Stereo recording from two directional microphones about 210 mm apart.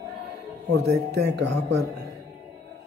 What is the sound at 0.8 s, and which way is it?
Speech, 50° right (ahead or behind).